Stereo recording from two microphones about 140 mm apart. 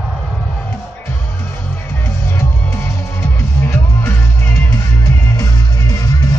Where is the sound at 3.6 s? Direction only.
15° left (ahead or behind).